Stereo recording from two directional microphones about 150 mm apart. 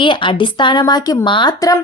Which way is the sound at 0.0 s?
35° left (ahead or behind).